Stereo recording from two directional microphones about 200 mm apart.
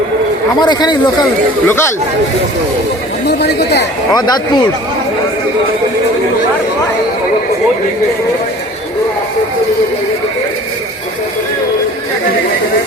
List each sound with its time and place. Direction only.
0.6 s speech: 20° left (ahead or behind)
3.2 s speech: 55° left (ahead or behind)